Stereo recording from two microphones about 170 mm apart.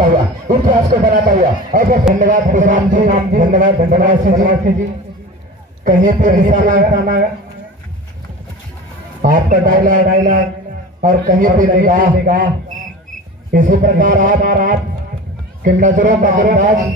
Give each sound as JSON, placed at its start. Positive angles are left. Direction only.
{"t": 0.1, "sound": "speech", "side_deg": -55}
{"t": 5.9, "sound": "speech", "side_deg": -50}
{"t": 9.2, "sound": "speech", "side_deg": -50}
{"t": 13.5, "sound": "speech", "side_deg": -55}